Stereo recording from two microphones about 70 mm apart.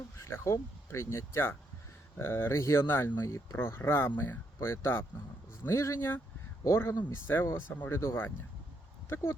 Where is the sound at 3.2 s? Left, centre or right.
Left.